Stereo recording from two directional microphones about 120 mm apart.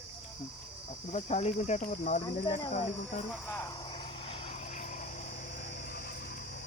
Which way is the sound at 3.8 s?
50° left (ahead or behind).